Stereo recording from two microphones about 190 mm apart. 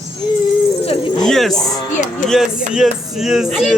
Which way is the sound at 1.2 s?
Centre (ahead or behind).